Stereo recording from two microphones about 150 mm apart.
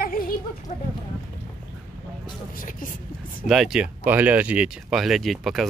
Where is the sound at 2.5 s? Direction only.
65° left (ahead or behind).